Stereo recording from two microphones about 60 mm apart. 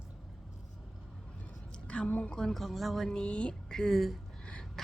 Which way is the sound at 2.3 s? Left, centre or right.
Centre.